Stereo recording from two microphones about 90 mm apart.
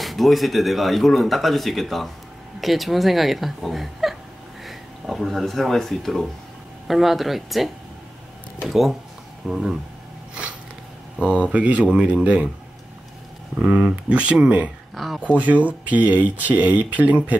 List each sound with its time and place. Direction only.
0.0 s speech: centre (ahead or behind)
11.1 s speech: 10° right (ahead or behind)
13.6 s speech: 15° right (ahead or behind)
15.0 s speech: centre (ahead or behind)
15.3 s speech: 15° right (ahead or behind)